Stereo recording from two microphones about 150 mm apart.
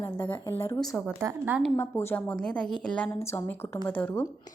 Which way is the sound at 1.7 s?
15° left (ahead or behind).